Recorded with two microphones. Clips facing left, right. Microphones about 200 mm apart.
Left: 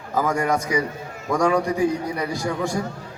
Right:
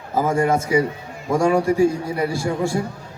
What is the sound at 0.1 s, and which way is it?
Speech, 25° right (ahead or behind).